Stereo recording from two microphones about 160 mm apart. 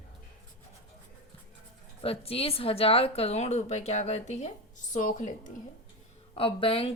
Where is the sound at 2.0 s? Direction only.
35° left (ahead or behind).